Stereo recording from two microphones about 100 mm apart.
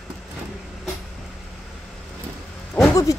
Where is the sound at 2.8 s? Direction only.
15° left (ahead or behind).